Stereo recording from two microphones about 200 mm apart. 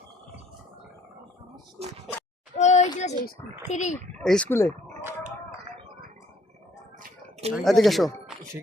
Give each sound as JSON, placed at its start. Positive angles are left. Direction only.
{"t": 2.6, "sound": "a sound", "side_deg": 35}
{"t": 3.7, "sound": "speech", "side_deg": 35}
{"t": 4.2, "sound": "speech", "side_deg": 5}
{"t": 7.5, "sound": "speech", "side_deg": 0}